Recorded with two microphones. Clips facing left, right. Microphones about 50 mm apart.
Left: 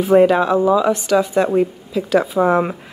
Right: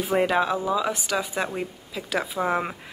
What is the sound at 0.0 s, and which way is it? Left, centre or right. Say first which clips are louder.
Speech: left 10 dB; centre.